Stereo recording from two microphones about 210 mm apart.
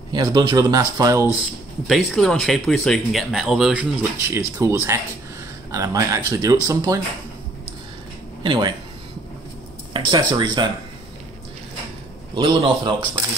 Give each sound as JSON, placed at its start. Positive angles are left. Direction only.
{"t": 0.1, "sound": "speech", "side_deg": -20}
{"t": 1.4, "sound": "speech", "side_deg": 0}
{"t": 8.4, "sound": "speech", "side_deg": -20}
{"t": 9.9, "sound": "speech", "side_deg": -20}
{"t": 12.4, "sound": "speech", "side_deg": -25}